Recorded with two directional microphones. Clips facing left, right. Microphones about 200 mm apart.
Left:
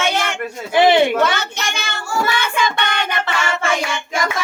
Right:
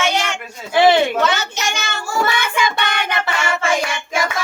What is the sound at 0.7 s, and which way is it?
Speech, 15° left (ahead or behind).